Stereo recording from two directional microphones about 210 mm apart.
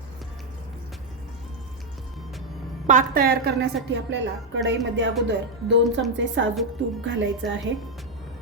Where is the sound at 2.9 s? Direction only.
40° right (ahead or behind); by 7.6 s 60° right (ahead or behind).